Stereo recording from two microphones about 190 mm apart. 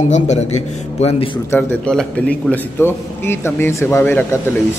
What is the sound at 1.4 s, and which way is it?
A man's voice, 5° left (ahead or behind).